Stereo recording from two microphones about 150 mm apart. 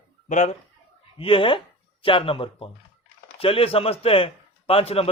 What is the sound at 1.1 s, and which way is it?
A man's voice, 35° left (ahead or behind).